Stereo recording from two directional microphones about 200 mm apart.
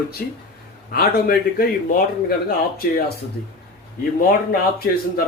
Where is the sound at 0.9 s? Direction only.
50° left (ahead or behind).